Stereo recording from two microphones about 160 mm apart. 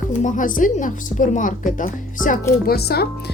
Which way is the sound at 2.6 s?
80° left.